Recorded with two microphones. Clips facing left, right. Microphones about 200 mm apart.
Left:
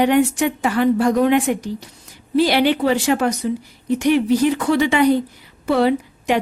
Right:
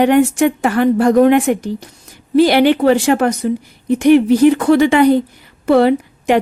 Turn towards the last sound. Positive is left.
turn(degrees=-55)  # may be behind; listen again after turning